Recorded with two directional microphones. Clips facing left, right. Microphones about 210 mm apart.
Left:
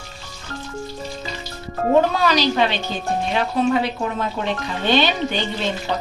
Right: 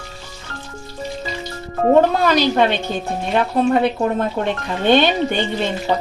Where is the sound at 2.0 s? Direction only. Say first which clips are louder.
Right 1 dB; 55° right (ahead or behind).